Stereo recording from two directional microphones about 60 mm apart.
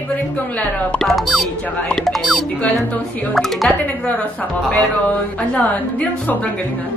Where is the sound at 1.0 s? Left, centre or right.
Centre.